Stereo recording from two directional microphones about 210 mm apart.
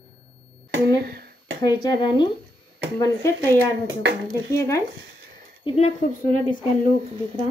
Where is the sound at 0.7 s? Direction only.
50° right (ahead or behind).